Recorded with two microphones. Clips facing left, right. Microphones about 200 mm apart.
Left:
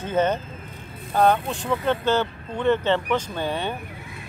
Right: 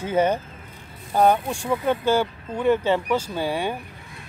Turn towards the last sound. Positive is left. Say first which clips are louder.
# right 2 dB
turn(degrees=-10)  # may be behind; listen again after turning